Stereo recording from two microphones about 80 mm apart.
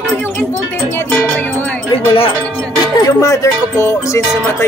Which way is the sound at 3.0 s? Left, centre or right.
Left.